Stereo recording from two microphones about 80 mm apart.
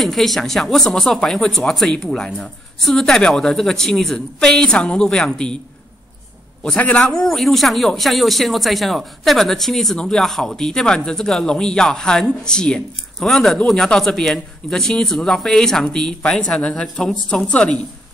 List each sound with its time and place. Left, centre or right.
0.0 s a man's voice: centre
6.8 s a man's voice: centre
7.1 s a man's voice: centre